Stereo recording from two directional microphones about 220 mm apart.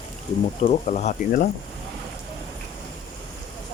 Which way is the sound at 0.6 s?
30° left (ahead or behind).